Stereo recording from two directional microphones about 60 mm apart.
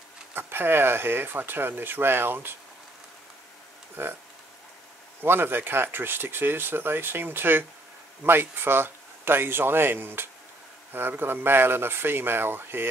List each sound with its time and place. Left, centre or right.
0.3 s speech: right
4.0 s speech: right
5.2 s speech: right